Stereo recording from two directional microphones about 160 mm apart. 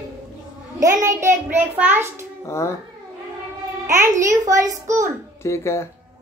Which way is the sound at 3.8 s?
20° right (ahead or behind).